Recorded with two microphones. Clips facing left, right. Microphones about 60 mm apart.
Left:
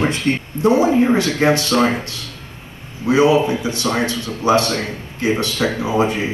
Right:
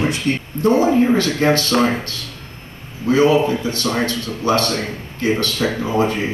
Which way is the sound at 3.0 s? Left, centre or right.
Centre.